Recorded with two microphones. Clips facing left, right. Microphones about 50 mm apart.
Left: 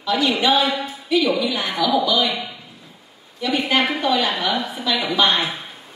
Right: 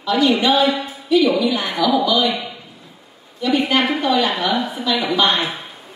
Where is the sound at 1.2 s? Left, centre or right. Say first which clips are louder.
Right 3 dB; centre.